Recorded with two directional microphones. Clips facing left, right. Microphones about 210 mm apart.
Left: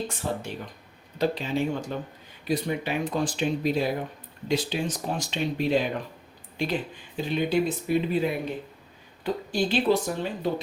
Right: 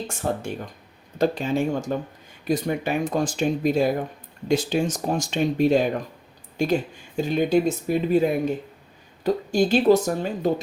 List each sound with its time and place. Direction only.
0.1 s speech: 45° right (ahead or behind)